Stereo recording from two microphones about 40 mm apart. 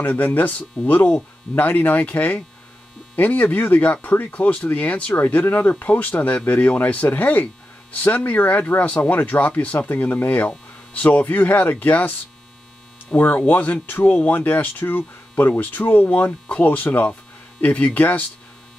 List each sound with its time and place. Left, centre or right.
0.1 s speech: left
16.3 s speech: left
16.6 s speech: left